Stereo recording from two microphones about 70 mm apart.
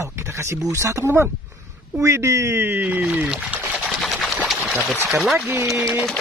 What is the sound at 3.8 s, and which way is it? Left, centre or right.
Sewing machine, centre.